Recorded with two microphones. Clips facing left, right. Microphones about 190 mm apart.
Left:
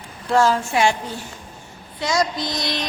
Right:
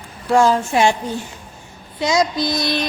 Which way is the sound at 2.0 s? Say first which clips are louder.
Right 4 dB; 20° right (ahead or behind).